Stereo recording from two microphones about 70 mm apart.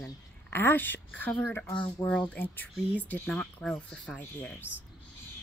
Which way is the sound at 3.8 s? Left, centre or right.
Centre.